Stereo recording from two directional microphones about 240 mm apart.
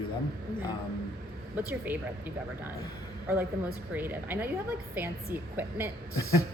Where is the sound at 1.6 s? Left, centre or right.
Centre.